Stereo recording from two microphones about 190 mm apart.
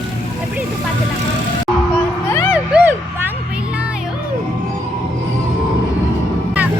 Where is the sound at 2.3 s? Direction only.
15° left (ahead or behind).